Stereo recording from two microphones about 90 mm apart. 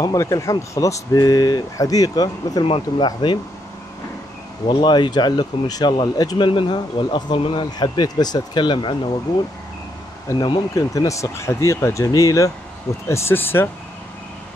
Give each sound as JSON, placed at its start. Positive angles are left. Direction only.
{"t": 0.0, "sound": "speech", "side_deg": 40}
{"t": 2.6, "sound": "speech", "side_deg": 90}
{"t": 3.1, "sound": "speech", "side_deg": 60}
{"t": 4.6, "sound": "speech", "side_deg": 55}
{"t": 10.3, "sound": "speech", "side_deg": 30}
{"t": 13.1, "sound": "speech", "side_deg": 25}